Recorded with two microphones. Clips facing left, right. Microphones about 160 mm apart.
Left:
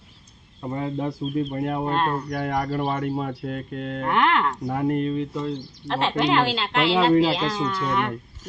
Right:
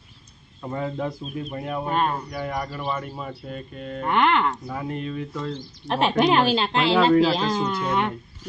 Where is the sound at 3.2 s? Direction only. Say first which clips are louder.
Left 5 dB; 80° left.